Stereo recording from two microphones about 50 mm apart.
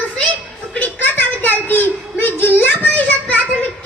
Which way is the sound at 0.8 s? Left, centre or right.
Left.